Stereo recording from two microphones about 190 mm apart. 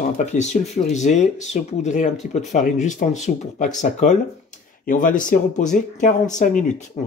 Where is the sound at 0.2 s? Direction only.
35° left (ahead or behind).